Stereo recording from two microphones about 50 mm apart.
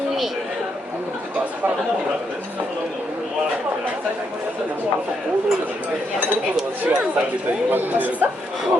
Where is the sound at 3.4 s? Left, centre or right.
Right.